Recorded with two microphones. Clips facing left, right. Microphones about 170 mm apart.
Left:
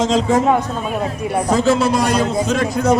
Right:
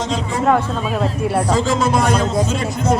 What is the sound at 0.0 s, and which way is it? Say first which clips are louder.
Speech: left 6 dB; 90° left.